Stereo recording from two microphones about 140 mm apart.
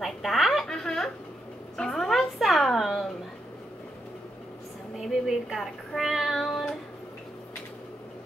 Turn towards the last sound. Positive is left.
turn(degrees=0)  # may be behind; listen again after turning